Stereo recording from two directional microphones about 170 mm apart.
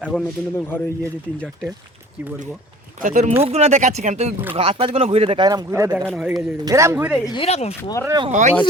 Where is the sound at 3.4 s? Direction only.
40° right (ahead or behind); by 7.1 s 15° right (ahead or behind).